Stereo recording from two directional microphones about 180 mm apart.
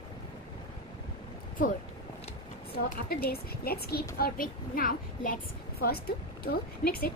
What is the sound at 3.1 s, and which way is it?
A woman's voice, 60° left (ahead or behind).